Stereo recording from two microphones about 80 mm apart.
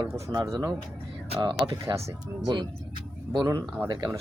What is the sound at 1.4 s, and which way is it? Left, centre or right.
Speech, right.